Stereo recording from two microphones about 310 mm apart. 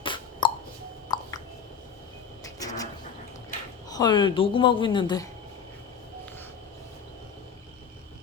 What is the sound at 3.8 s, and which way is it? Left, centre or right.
Speech, centre.